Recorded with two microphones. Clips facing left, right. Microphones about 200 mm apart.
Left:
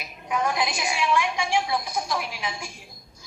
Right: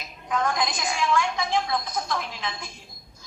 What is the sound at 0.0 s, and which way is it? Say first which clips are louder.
A woman's voice: even; 10° left (ahead or behind).